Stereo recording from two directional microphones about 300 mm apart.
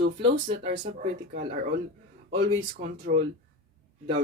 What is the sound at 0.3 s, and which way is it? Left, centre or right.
Speech, right.